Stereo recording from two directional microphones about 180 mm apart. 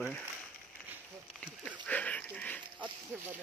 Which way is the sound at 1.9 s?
5° left (ahead or behind).